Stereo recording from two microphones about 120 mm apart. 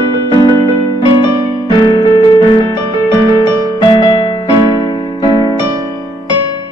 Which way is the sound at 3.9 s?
35° left (ahead or behind).